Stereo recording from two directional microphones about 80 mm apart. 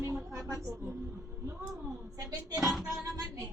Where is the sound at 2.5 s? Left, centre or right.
Centre.